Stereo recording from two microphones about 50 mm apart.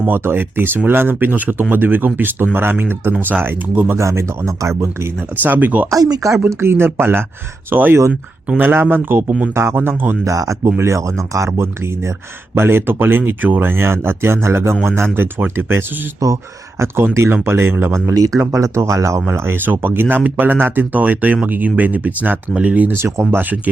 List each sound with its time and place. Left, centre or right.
0.1 s speech: right
3.9 s speech: right
5.4 s speech: right
5.9 s speech: right
6.5 s speech: right
9.6 s speech: right
10.2 s speech: right
12.5 s speech: right
16.2 s speech: right
17.3 s speech: right
18.3 s speech: right
19.3 s speech: right
23.0 s speech: right